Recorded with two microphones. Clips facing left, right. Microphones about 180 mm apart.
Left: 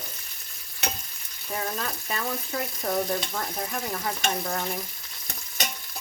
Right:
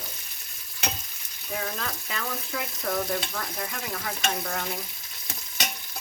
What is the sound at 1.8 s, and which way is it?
Speech, 40° left (ahead or behind).